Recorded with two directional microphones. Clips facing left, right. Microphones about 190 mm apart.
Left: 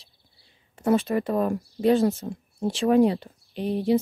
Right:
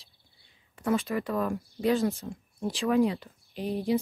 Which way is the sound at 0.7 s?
40° left (ahead or behind).